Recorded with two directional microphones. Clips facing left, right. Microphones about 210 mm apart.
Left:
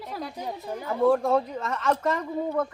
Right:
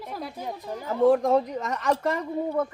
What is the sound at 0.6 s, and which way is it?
Speech, 10° left (ahead or behind).